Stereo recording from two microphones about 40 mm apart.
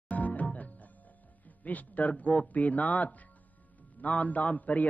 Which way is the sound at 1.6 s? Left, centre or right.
Left.